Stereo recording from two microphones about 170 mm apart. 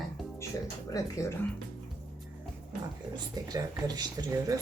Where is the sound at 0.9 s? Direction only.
20° left (ahead or behind).